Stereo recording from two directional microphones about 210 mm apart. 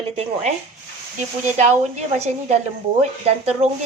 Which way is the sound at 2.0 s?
30° right (ahead or behind).